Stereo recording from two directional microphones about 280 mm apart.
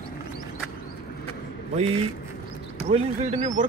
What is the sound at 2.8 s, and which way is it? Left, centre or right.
Speech, right.